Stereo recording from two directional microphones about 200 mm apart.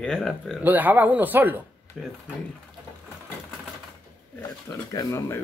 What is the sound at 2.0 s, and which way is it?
Speech, centre (ahead or behind).